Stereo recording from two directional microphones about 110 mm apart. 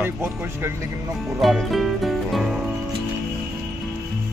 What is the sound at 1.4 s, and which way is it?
Music, centre (ahead or behind).